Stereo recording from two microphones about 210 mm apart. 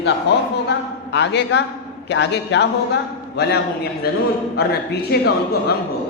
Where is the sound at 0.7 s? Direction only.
55° left (ahead or behind).